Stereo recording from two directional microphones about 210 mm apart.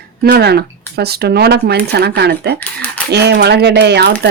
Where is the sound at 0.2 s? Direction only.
50° right (ahead or behind).